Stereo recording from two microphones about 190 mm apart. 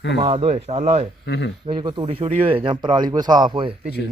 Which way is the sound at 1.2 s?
60° left (ahead or behind).